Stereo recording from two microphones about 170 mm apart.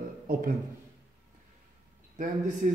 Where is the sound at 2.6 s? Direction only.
50° right (ahead or behind).